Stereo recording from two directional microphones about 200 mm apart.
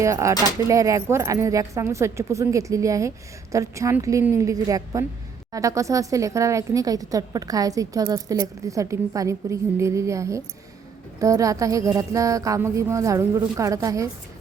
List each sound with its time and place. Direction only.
0.0 s a woman's voice: 15° right (ahead or behind)